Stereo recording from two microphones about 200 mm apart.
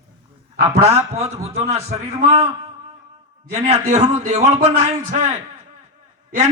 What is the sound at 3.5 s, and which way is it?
A man's voice, 35° right (ahead or behind).